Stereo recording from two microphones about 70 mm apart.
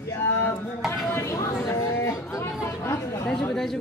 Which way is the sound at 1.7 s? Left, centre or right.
Left.